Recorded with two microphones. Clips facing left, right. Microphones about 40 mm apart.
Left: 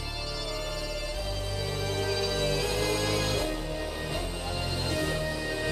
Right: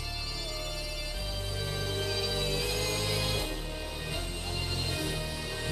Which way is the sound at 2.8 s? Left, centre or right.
Centre.